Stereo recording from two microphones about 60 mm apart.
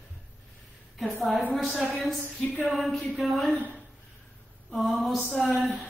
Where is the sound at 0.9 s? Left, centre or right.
Centre.